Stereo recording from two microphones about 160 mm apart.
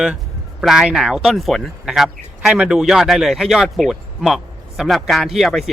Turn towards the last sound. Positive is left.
turn(degrees=0)  # may be behind; listen again after turning